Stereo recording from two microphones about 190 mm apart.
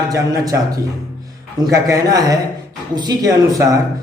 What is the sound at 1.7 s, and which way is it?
A man's voice, 15° right (ahead or behind).